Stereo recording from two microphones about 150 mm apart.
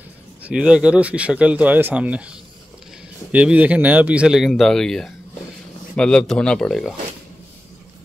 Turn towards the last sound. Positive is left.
turn(degrees=0)  # may be behind; listen again after turning